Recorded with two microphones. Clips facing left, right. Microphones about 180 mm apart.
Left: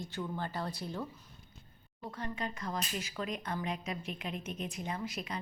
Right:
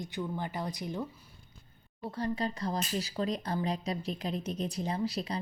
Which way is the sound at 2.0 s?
35° right (ahead or behind).